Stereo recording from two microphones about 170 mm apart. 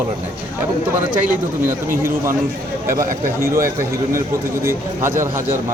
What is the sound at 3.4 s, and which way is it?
Speech, 15° right (ahead or behind).